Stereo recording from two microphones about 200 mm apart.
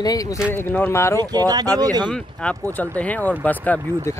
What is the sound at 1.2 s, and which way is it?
Speech, 20° right (ahead or behind).